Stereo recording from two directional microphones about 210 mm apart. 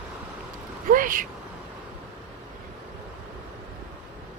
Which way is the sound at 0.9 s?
40° right (ahead or behind).